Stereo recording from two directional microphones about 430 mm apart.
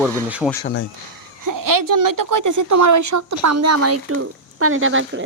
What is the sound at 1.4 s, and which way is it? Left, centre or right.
A woman's voice, right.